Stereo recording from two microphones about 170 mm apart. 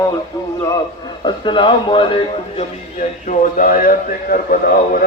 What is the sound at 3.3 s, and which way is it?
A man's voice, 55° left (ahead or behind).